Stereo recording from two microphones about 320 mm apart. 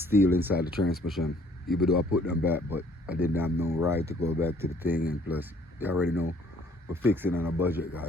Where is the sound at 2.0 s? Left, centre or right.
Left.